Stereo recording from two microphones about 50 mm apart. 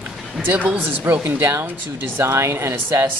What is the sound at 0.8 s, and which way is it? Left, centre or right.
Speech, right.